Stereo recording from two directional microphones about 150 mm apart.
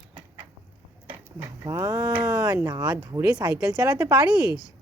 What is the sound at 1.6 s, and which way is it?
Speech, 20° right (ahead or behind).